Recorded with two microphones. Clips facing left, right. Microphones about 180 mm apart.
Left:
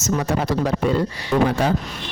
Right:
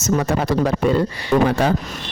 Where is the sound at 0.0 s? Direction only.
60° right (ahead or behind).